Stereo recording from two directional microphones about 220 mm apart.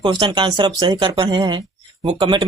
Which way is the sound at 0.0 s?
20° right (ahead or behind).